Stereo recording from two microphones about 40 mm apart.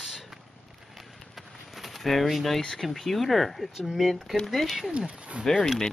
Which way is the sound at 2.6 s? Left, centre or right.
Centre.